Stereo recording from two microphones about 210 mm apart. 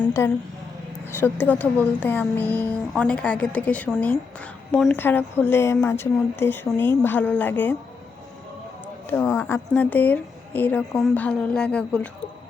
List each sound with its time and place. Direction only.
1.0 s a woman's voice: 10° left (ahead or behind)
9.0 s a woman's voice: 10° left (ahead or behind)